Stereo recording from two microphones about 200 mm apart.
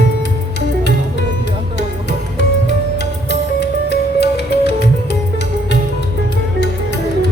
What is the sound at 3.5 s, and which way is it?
Music, 55° left (ahead or behind).